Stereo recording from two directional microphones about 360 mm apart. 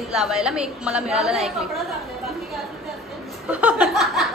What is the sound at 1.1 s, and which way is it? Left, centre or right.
Chatter, centre.